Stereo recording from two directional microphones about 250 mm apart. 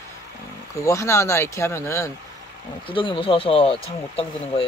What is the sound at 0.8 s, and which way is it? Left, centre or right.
Speech, centre.